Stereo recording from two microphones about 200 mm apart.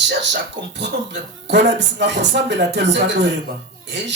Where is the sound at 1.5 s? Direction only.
60° right (ahead or behind).